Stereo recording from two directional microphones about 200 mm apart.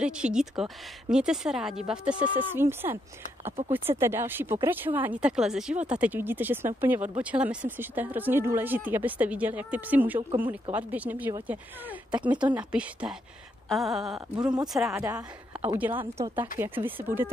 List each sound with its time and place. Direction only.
0.0 s a woman's voice: 5° right (ahead or behind)
4.0 s a woman's voice: 10° right (ahead or behind)
14.4 s speech: 20° right (ahead or behind)
14.7 s a woman's voice: centre (ahead or behind)